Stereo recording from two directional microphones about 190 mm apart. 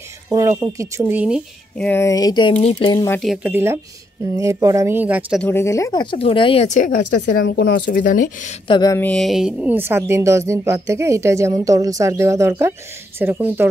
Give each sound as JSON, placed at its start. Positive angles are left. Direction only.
{"t": 0.3, "sound": "speech", "side_deg": -15}
{"t": 1.8, "sound": "speech", "side_deg": 10}
{"t": 3.1, "sound": "speech", "side_deg": 0}
{"t": 3.4, "sound": "speech", "side_deg": -10}
{"t": 5.4, "sound": "speech", "side_deg": 10}
{"t": 7.4, "sound": "speech", "side_deg": 60}
{"t": 8.6, "sound": "speech", "side_deg": 20}
{"t": 9.0, "sound": "speech", "side_deg": 0}